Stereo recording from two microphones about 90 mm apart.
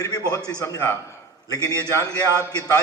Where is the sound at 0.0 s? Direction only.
35° left (ahead or behind).